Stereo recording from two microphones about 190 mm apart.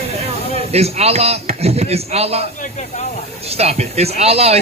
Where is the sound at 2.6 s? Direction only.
40° left (ahead or behind).